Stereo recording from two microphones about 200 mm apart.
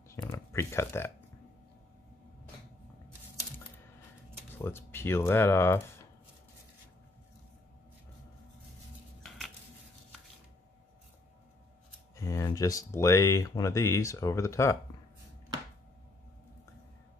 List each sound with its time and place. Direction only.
0.1 s a sound: 15° left (ahead or behind)
4.6 s speech: 10° left (ahead or behind)
12.2 s speech: 15° left (ahead or behind)